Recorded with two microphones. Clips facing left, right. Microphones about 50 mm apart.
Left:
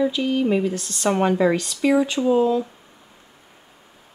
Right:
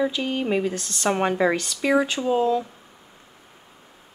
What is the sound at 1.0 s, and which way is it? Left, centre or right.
Speech, right.